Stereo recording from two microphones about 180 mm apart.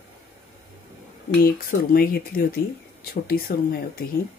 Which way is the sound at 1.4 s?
55° left (ahead or behind).